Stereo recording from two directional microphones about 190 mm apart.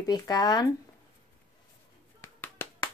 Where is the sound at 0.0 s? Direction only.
20° left (ahead or behind).